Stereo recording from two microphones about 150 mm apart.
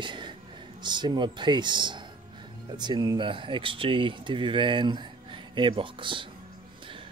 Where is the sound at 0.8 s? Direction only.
30° right (ahead or behind).